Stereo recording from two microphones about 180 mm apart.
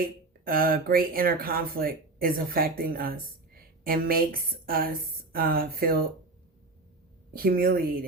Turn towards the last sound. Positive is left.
turn(degrees=-55)  # may be behind; listen again after turning